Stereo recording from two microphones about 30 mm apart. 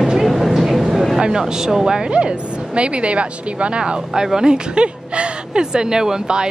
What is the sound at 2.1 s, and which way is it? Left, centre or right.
Speech, right.